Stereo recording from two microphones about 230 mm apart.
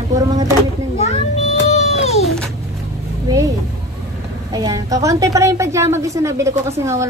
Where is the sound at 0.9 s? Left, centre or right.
Left.